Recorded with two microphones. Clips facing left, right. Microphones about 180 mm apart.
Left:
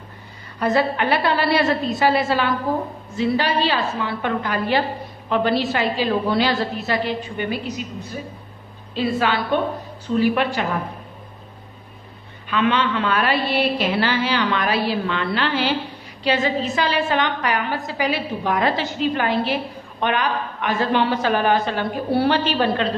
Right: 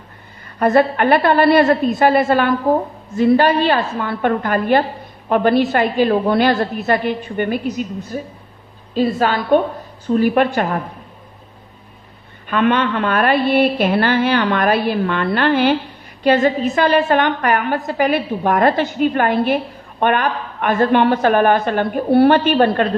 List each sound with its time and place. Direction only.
0.6 s a woman's voice: 50° right (ahead or behind)
12.4 s a woman's voice: 50° right (ahead or behind)